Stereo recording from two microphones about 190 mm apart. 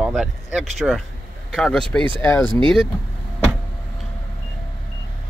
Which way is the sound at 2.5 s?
25° right (ahead or behind).